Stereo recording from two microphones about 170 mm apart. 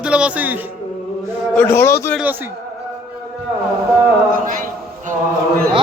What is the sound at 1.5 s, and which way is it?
Speech, 10° left (ahead or behind).